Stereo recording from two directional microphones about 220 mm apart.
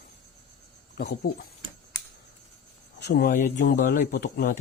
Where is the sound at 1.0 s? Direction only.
45° left (ahead or behind).